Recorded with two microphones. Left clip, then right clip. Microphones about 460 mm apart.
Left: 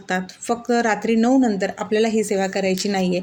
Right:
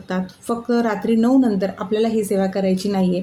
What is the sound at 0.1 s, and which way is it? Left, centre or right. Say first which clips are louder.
Speech: left 2 dB; right.